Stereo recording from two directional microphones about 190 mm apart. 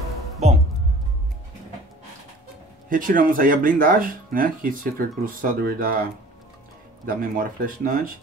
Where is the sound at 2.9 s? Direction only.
45° right (ahead or behind).